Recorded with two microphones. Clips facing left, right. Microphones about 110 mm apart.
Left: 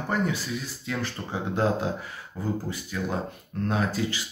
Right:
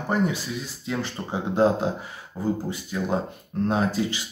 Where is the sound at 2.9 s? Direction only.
25° right (ahead or behind).